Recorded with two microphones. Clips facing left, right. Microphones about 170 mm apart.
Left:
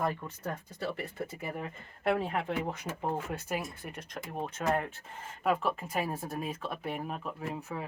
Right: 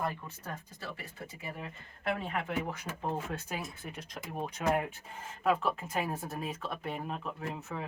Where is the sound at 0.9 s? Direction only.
50° left (ahead or behind).